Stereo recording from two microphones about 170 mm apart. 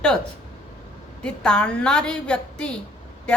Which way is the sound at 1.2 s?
5° left (ahead or behind).